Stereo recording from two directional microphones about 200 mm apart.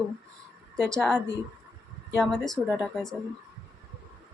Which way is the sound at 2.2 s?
Centre (ahead or behind).